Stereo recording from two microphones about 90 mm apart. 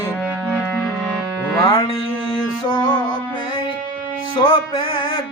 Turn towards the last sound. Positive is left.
turn(degrees=70)  # may be behind; listen again after turning